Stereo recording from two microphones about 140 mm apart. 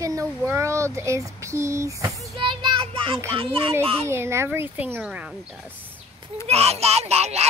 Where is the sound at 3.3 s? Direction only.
40° right (ahead or behind).